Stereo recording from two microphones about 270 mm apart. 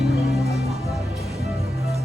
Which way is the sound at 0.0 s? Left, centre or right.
Centre.